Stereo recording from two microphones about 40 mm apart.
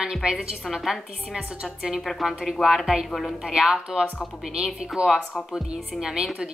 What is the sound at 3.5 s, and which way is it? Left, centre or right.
A woman's voice, centre.